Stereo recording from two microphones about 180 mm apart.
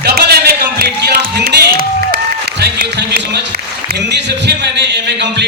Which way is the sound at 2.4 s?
65° right (ahead or behind).